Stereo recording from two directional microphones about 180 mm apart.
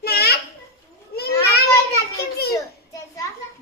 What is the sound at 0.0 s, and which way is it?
Children playing, 60° left (ahead or behind).